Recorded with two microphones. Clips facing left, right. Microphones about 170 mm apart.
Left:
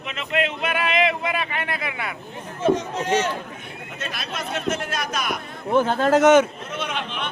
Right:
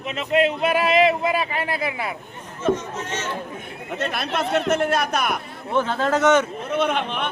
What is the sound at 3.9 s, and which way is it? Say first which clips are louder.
A man's voice: right 8 dB; 60° right (ahead or behind).